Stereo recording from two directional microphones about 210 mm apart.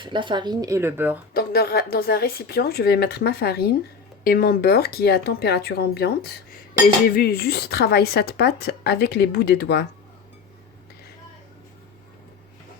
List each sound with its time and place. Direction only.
0.0 s speech: 20° right (ahead or behind)
1.3 s speech: 45° left (ahead or behind)